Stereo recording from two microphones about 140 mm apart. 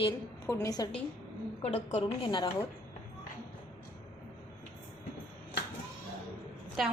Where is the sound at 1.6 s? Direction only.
45° left (ahead or behind).